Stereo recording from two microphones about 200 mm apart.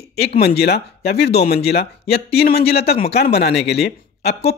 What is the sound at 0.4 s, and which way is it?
Speech, 55° left (ahead or behind).